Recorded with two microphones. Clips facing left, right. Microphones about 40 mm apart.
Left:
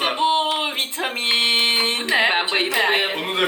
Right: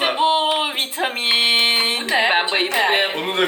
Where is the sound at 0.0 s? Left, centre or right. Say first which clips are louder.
Right 2 dB; centre.